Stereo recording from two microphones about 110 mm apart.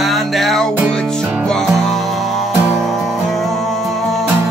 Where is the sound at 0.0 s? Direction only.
Centre (ahead or behind).